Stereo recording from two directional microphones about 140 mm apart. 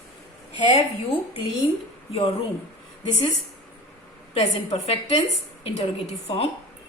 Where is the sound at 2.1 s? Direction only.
45° left (ahead or behind).